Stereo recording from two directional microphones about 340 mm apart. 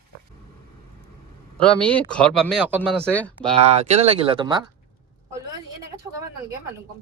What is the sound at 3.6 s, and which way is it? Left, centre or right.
Speech, centre.